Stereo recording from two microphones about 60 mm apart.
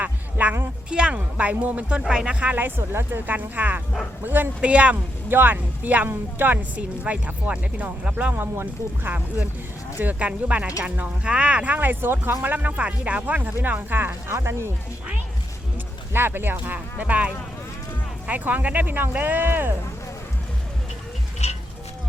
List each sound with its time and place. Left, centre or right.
0.0 s a sound: right
0.9 s speech: centre
2.0 s speech: centre
2.5 s speech: right
4.6 s speech: right
5.3 s speech: right
8.3 s speech: right
14.3 s speech: right
16.1 s speech: right